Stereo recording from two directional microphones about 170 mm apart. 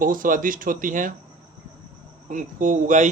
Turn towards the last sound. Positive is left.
turn(degrees=-45)  # may be behind; listen again after turning